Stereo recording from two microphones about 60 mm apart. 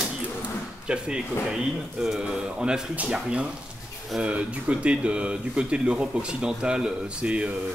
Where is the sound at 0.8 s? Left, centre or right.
Centre.